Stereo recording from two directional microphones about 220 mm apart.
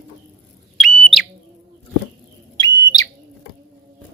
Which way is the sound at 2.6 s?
15° left (ahead or behind).